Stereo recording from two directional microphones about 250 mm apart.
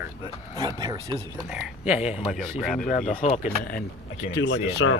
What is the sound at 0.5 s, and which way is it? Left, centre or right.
Speech, centre.